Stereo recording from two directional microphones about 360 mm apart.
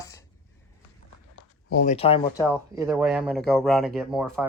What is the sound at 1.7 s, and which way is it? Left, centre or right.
Speech, left.